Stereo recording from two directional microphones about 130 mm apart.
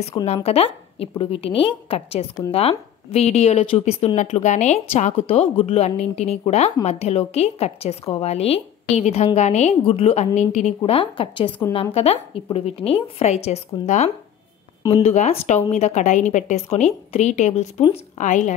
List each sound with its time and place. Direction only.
0.0 s a woman's voice: 50° left (ahead or behind); by 10.7 s 65° left (ahead or behind)
10.9 s a woman's voice: 40° left (ahead or behind); by 17.8 s 60° left (ahead or behind)
18.1 s a woman's voice: 70° left (ahead or behind)